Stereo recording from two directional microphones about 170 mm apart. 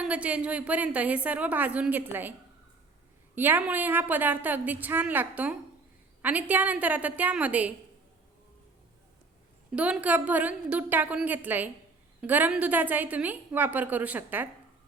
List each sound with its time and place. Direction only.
0.0 s a woman's voice: 10° right (ahead or behind)
3.3 s a woman's voice: 10° right (ahead or behind)
9.7 s a woman's voice: 5° right (ahead or behind)